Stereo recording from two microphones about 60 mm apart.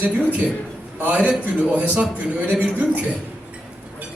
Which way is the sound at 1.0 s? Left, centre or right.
Right.